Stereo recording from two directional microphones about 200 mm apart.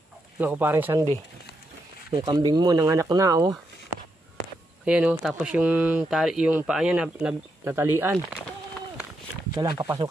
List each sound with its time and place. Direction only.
0.4 s speech: 10° right (ahead or behind)
2.1 s speech: 20° right (ahead or behind)
4.8 s speech: 5° right (ahead or behind)
9.5 s speech: 20° right (ahead or behind)